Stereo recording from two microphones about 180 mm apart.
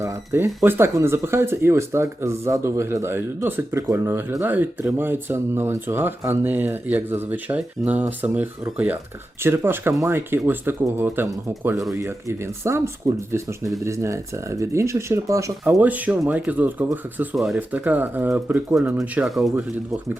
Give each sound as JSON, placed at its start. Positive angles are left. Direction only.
{"t": 0.0, "sound": "speech", "side_deg": -15}